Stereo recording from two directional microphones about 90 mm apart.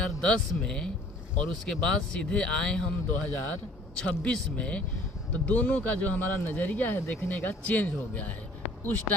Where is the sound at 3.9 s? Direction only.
10° left (ahead or behind).